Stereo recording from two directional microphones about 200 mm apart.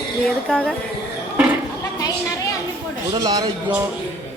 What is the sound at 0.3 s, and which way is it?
Speech, 5° left (ahead or behind).